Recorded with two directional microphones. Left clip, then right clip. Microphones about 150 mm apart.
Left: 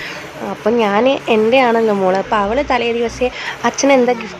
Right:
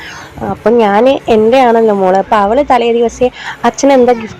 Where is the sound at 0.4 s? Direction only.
25° right (ahead or behind).